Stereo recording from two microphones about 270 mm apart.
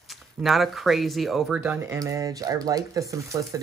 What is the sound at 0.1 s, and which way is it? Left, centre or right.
Speech, centre.